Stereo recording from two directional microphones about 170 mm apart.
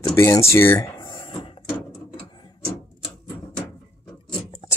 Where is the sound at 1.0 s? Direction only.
25° left (ahead or behind).